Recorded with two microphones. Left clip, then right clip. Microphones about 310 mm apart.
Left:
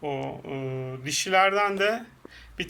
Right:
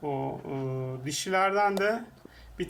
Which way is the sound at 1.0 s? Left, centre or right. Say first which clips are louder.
Left 7 dB; centre.